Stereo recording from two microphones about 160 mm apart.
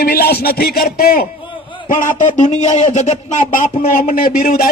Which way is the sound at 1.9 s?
55° left (ahead or behind).